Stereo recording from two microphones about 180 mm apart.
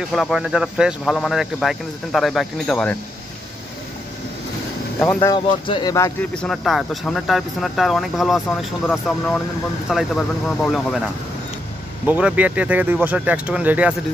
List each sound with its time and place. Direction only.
0.1 s speech: centre (ahead or behind)
5.0 s speech: 10° left (ahead or behind)
5.3 s speech: 25° left (ahead or behind)
6.3 s speech: centre (ahead or behind)
12.1 s speech: 10° right (ahead or behind)